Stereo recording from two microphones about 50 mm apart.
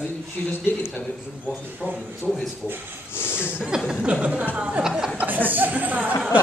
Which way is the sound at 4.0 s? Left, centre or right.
Right.